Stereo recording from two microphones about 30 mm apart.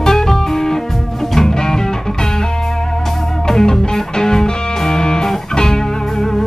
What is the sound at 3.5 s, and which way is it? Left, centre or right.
Music, left.